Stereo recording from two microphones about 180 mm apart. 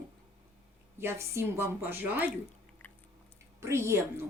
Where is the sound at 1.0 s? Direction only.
15° right (ahead or behind).